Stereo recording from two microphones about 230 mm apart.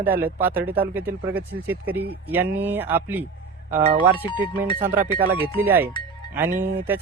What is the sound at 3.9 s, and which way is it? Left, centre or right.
Speech, right.